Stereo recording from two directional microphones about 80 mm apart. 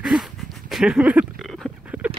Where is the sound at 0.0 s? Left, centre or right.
Centre.